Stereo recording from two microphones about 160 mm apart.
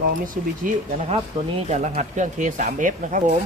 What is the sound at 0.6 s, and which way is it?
Speech, 55° right (ahead or behind).